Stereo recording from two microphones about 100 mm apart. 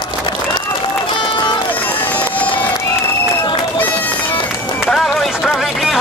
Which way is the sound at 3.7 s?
20° left (ahead or behind).